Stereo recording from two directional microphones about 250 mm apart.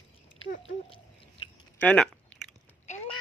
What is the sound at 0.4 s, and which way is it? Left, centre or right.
Speech, left.